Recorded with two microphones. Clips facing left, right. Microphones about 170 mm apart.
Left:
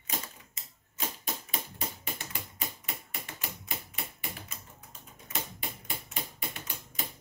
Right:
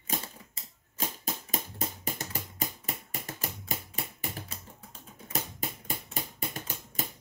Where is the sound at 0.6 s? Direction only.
35° right (ahead or behind).